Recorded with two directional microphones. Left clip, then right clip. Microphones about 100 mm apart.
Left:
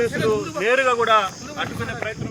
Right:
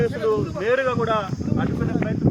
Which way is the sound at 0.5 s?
75° left (ahead or behind).